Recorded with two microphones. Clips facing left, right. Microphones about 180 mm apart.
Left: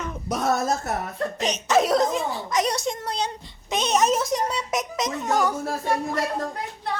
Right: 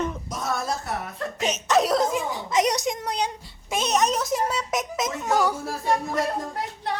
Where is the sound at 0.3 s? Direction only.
65° left (ahead or behind).